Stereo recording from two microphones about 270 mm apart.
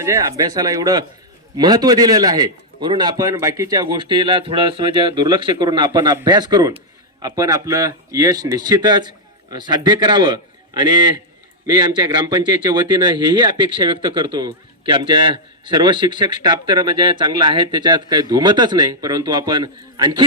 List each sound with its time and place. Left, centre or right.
0.0 s speech: centre